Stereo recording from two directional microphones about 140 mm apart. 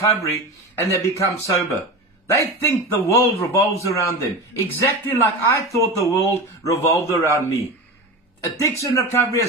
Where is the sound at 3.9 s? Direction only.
20° left (ahead or behind).